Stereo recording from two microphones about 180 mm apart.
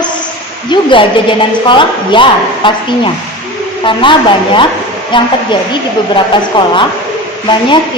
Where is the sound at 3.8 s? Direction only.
25° left (ahead or behind).